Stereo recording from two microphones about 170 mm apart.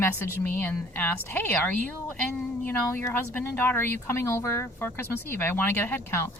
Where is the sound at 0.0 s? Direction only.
10° left (ahead or behind).